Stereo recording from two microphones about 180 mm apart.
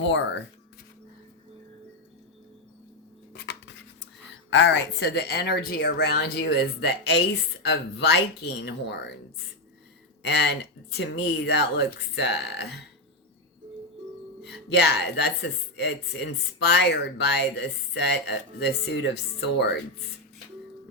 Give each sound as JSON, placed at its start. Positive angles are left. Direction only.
{"t": 0.0, "sound": "speech", "side_deg": 80}
{"t": 3.3, "sound": "a sound", "side_deg": 70}
{"t": 4.5, "sound": "speech", "side_deg": 70}
{"t": 10.2, "sound": "speech", "side_deg": 70}
{"t": 14.7, "sound": "speech", "side_deg": 70}